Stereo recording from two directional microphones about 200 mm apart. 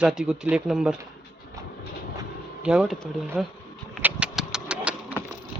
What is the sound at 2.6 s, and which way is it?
Speech, 5° right (ahead or behind).